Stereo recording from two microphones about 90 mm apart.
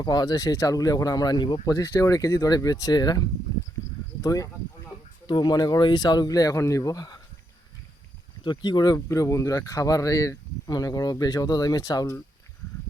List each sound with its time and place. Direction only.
0.0 s speech: 50° left (ahead or behind)
1.7 s speech: 40° left (ahead or behind)
3.5 s a sound: 50° left (ahead or behind)
4.2 s speech: 40° left (ahead or behind)
5.2 s speech: 55° left (ahead or behind)
8.4 s speech: 55° left (ahead or behind)
9.0 s speech: 35° left (ahead or behind)